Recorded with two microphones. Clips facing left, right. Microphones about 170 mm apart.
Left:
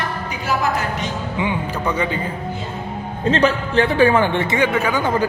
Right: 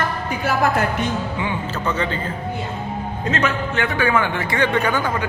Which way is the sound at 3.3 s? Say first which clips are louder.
Left 5 dB; 30° left (ahead or behind).